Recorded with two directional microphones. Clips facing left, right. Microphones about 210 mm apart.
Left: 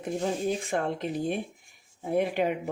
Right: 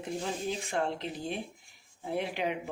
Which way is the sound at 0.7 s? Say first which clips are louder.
Left 4 dB; 50° left (ahead or behind).